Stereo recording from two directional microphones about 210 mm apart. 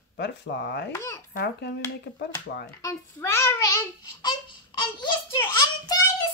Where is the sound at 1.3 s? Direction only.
55° left (ahead or behind).